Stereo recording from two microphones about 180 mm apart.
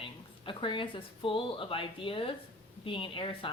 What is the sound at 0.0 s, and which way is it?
A woman's voice, 30° left (ahead or behind).